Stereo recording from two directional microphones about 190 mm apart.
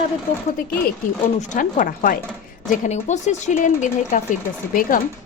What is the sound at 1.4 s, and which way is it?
Speech, 45° left (ahead or behind).